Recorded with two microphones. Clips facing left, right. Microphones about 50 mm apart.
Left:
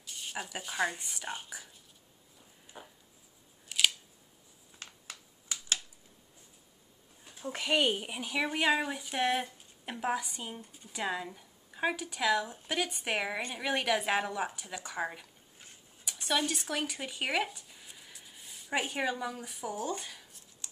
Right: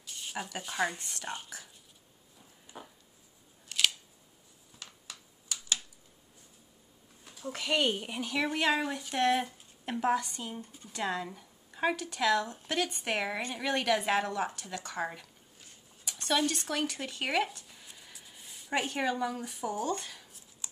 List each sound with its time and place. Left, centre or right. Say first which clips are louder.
0.0 s speech: right 1 dB; centre
2.6 s a sound: right 2 dB; centre
3.6 s scissors: even; centre
4.7 s finger snapping: left 1 dB; left
7.3 s speech: left 1 dB; centre